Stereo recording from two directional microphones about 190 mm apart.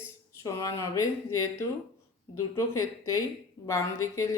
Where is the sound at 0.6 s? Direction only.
15° left (ahead or behind).